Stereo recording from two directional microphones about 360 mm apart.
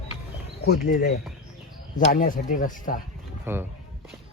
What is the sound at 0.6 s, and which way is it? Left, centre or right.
Speech, left.